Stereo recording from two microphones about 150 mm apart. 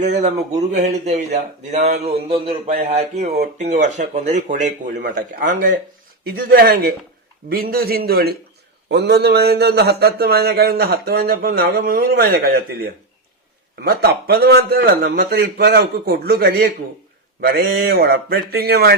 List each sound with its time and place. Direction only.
0.0 s speech: 55° right (ahead or behind)
6.2 s a man's voice: 85° right